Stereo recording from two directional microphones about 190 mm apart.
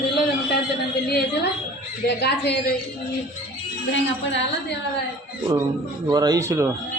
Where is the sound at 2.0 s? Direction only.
60° left (ahead or behind).